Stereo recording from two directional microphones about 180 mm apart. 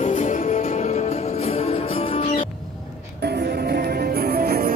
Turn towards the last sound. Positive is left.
turn(degrees=-55)  # may be behind; listen again after turning